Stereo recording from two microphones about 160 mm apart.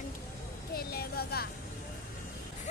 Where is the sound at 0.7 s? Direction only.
75° left (ahead or behind).